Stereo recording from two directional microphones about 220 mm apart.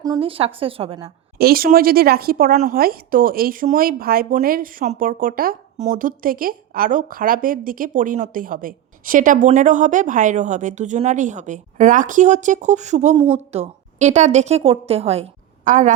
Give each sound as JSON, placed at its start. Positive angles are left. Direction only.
{"t": 0.0, "sound": "a woman's voice", "side_deg": -20}
{"t": 1.4, "sound": "a woman's voice", "side_deg": -45}